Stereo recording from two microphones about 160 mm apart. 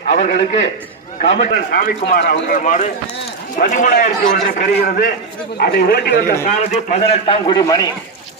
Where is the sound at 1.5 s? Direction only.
60° left (ahead or behind).